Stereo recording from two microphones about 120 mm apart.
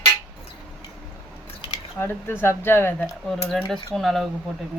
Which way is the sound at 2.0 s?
20° left (ahead or behind).